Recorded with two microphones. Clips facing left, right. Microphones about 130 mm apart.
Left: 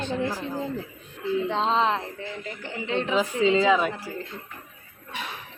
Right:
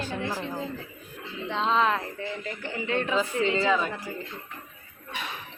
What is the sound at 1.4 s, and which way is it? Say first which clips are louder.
Speech: right 1 dB; 35° left (ahead or behind).